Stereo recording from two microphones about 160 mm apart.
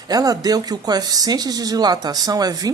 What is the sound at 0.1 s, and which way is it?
Speech, 25° right (ahead or behind).